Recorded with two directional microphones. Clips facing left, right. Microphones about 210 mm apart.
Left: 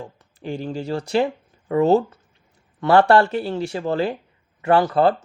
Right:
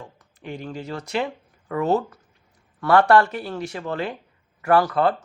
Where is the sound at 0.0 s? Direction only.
30° left (ahead or behind).